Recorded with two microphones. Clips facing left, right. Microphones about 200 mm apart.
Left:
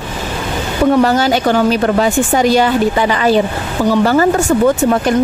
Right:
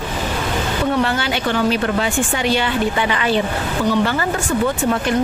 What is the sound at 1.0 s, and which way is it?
A woman's voice, 40° left (ahead or behind).